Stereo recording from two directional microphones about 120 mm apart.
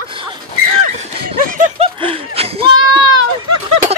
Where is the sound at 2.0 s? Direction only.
50° right (ahead or behind).